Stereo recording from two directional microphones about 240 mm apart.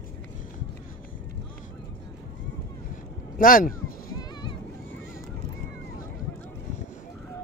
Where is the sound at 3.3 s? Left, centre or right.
Left.